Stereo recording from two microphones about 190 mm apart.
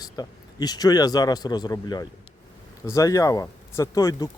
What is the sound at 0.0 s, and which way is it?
A man's voice, 20° left (ahead or behind).